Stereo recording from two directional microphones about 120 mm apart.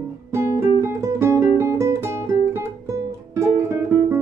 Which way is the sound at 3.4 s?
25° right (ahead or behind).